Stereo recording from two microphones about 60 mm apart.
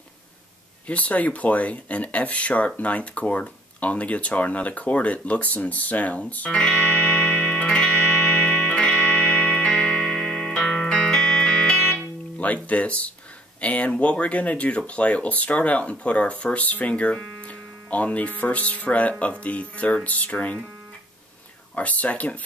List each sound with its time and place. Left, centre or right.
0.8 s speech: left
6.6 s music: centre
12.6 s speech: left
21.7 s speech: left